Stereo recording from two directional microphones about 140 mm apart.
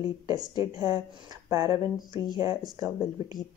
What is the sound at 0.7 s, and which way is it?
Speech, 25° right (ahead or behind).